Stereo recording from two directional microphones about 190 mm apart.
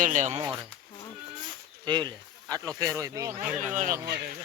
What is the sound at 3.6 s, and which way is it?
Speech, 40° right (ahead or behind).